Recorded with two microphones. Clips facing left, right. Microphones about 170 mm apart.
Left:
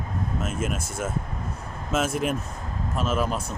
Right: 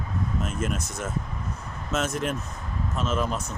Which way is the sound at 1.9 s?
10° left (ahead or behind).